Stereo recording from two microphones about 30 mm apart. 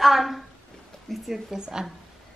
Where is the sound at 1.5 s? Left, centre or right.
Right.